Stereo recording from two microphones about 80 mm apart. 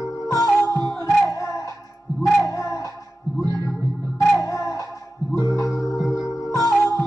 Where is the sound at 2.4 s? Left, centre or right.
Left.